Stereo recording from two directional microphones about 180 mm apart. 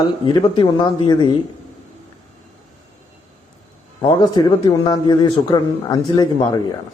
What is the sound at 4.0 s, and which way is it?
Speech, 25° left (ahead or behind).